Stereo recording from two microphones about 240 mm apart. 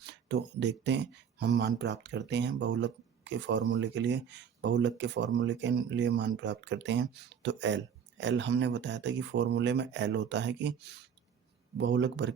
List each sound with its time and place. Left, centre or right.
0.0 s speech: right